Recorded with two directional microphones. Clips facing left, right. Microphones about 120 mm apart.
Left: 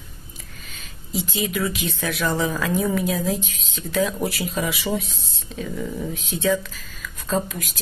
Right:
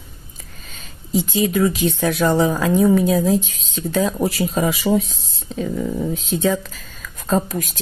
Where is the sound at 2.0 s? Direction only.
35° right (ahead or behind).